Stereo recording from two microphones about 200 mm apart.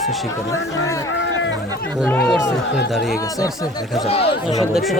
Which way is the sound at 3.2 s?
15° left (ahead or behind).